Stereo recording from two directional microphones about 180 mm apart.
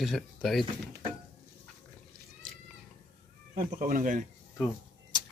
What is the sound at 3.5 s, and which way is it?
Speech, 50° right (ahead or behind).